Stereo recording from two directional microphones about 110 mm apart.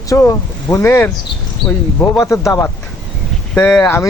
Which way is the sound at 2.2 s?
25° left (ahead or behind).